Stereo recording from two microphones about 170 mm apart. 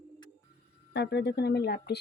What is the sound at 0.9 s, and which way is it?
Speech, 85° left.